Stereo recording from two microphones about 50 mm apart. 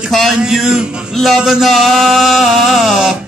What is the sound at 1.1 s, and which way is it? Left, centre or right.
Music, centre.